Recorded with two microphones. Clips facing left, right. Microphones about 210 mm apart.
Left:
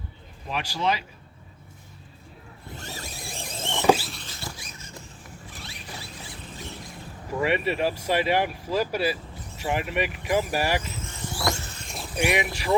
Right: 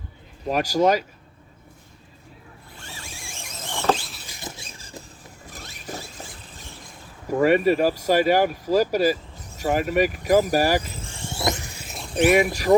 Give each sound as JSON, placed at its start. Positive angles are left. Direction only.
{"t": 0.4, "sound": "speech", "side_deg": -40}
{"t": 2.7, "sound": "power windows", "side_deg": 40}
{"t": 3.8, "sound": "rodents", "side_deg": 5}
{"t": 4.3, "sound": "a sound", "side_deg": -20}
{"t": 5.5, "sound": "vehicle", "side_deg": -45}
{"t": 6.8, "sound": "speech", "side_deg": -45}
{"t": 9.6, "sound": "vehicle", "side_deg": -40}
{"t": 12.2, "sound": "speech", "side_deg": -40}